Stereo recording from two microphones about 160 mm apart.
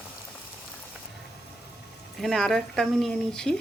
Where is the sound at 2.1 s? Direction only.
Centre (ahead or behind).